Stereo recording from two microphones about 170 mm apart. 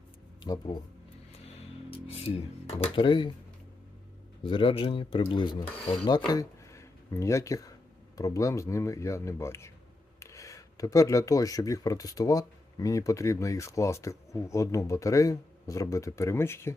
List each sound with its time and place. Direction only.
0.4 s speech: 25° left (ahead or behind)
1.9 s speech: 35° left (ahead or behind)
4.4 s speech: 30° left (ahead or behind)